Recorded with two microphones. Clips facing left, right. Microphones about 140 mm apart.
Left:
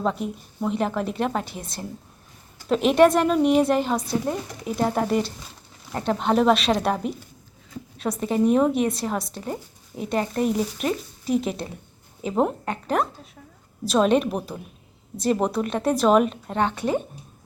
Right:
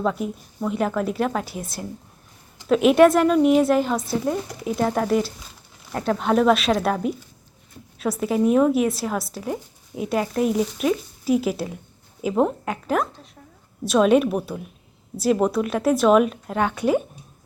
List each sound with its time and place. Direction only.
0.0 s a woman's voice: centre (ahead or behind)